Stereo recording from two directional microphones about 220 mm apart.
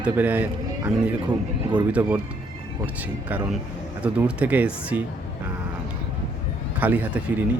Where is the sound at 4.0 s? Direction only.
5° right (ahead or behind).